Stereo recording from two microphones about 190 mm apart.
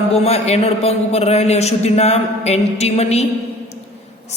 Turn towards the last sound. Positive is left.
turn(degrees=35)  # may be behind; listen again after turning